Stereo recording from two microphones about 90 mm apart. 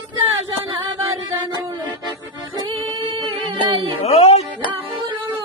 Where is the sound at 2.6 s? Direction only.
80° right; by 3.9 s 60° right (ahead or behind).